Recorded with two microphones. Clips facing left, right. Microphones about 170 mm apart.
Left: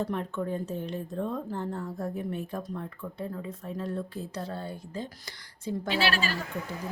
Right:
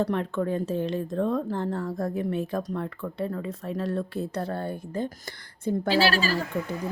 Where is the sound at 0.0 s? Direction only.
90° right; by 5.1 s 55° right (ahead or behind).